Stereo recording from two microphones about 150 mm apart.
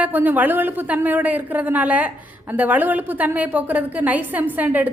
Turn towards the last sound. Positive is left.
turn(degrees=-10)  # may be behind; listen again after turning